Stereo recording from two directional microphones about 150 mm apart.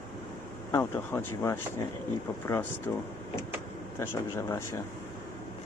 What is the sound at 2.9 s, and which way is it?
Speech, 15° left (ahead or behind).